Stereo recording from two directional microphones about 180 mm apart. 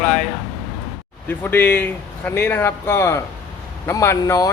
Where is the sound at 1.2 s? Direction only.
10° left (ahead or behind).